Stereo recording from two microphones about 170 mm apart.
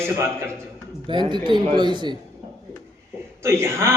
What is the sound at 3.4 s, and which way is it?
Speech, 15° right (ahead or behind).